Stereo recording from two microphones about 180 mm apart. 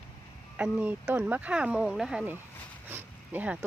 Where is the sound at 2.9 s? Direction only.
10° right (ahead or behind).